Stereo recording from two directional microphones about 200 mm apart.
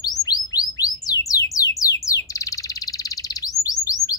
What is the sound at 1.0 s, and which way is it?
Bird, 15° left (ahead or behind).